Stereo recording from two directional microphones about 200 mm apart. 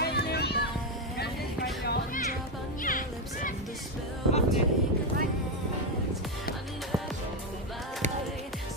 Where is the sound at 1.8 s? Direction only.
50° left (ahead or behind).